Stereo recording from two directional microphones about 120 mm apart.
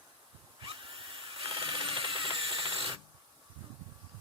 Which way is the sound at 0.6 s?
45° right (ahead or behind).